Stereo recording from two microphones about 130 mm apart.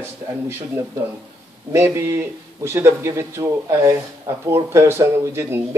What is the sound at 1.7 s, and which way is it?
Speech, 20° right (ahead or behind).